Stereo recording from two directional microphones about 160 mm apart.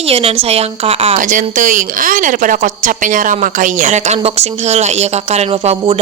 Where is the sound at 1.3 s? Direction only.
55° right (ahead or behind).